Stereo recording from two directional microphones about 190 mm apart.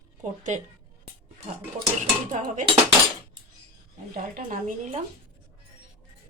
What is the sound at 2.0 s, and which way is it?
Speech, 40° right (ahead or behind).